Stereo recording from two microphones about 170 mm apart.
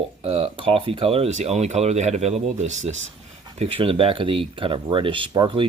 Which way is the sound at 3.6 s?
30° right (ahead or behind).